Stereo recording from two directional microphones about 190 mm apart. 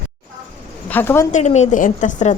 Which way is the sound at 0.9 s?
10° left (ahead or behind).